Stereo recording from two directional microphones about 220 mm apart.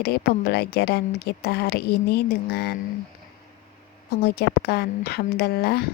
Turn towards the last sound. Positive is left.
turn(degrees=45)  # may be behind; listen again after turning